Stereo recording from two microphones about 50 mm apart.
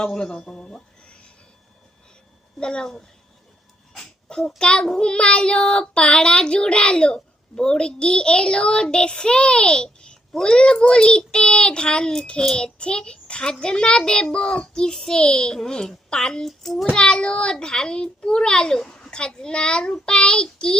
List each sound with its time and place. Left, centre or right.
0.1 s a sound: centre
2.6 s child singing: centre
16.5 s a child's voice: centre
16.9 s child singing: centre